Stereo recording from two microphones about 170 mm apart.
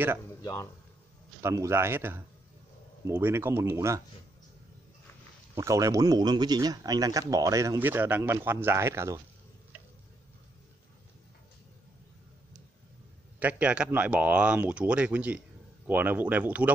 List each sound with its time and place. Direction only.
0.4 s a man's voice: 15° left (ahead or behind)
1.4 s speech: 15° right (ahead or behind)
5.5 s speech: 20° right (ahead or behind)
13.4 s speech: 10° right (ahead or behind)